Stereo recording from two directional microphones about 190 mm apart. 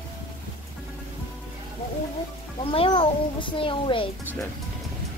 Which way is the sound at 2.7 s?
30° left (ahead or behind).